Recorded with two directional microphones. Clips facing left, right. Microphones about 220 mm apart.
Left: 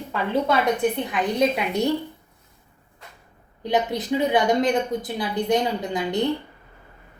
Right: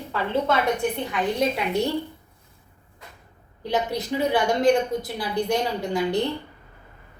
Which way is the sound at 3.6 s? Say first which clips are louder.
Left 2 dB; 20° left (ahead or behind).